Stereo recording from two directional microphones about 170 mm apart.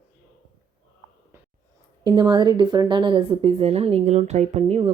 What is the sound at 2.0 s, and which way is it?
A woman's voice, 25° right (ahead or behind).